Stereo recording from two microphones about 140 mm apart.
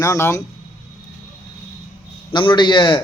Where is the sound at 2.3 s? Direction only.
35° left (ahead or behind).